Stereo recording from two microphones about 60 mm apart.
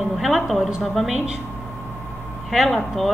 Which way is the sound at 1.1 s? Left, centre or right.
Centre.